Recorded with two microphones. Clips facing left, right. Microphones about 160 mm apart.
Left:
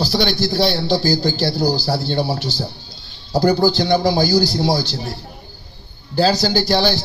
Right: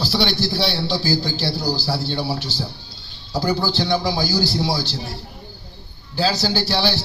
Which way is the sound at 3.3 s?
40° left (ahead or behind).